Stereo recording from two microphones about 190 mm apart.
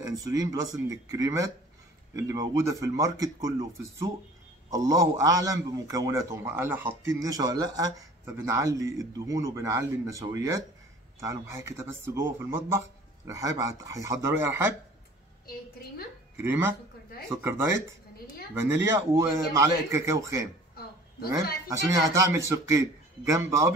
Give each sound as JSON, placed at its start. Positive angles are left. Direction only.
{"t": 0.0, "sound": "a man's voice", "side_deg": -20}
{"t": 16.3, "sound": "a man's voice", "side_deg": -10}
{"t": 20.8, "sound": "a sound", "side_deg": 55}
{"t": 21.6, "sound": "a man's voice", "side_deg": -15}